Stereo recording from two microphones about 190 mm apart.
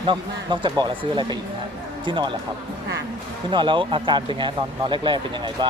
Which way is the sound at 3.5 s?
25° right (ahead or behind).